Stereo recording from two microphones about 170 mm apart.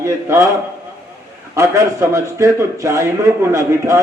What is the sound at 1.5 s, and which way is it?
A man's voice, 15° right (ahead or behind).